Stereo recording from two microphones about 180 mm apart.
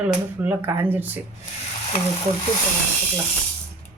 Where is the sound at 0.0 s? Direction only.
10° right (ahead or behind).